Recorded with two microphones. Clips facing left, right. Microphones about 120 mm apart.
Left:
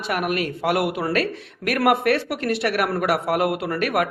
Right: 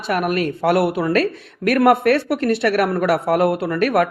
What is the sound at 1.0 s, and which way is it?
Speech, 55° right (ahead or behind).